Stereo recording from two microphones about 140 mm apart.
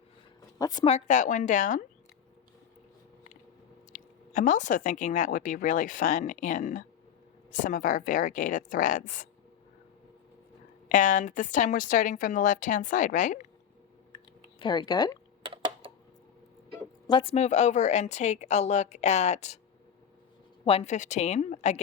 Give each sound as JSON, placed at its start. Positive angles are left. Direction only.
{"t": 0.6, "sound": "speech", "side_deg": 30}
{"t": 0.9, "sound": "speech", "side_deg": 55}
{"t": 3.9, "sound": "a woman's voice", "side_deg": 65}
{"t": 10.8, "sound": "a woman's voice", "side_deg": 65}
{"t": 14.6, "sound": "speech", "side_deg": 30}
{"t": 15.4, "sound": "typing", "side_deg": -35}
{"t": 17.1, "sound": "speech", "side_deg": 35}
{"t": 17.3, "sound": "a woman's voice", "side_deg": 55}
{"t": 20.7, "sound": "a woman's voice", "side_deg": 45}
{"t": 20.9, "sound": "speech", "side_deg": 55}